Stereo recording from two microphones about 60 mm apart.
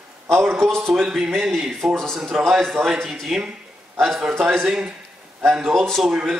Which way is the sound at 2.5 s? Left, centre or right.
Centre.